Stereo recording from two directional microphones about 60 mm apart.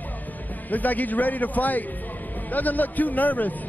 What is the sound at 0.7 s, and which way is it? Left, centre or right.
Speech, left.